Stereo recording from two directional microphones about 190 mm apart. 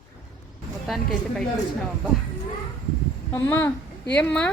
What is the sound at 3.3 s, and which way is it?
A child's voice, 10° left (ahead or behind).